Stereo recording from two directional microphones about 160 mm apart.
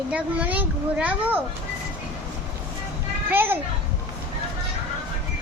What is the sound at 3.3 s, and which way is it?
Speech, 15° right (ahead or behind).